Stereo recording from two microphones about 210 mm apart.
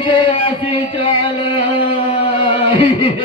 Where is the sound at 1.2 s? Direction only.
25° left (ahead or behind).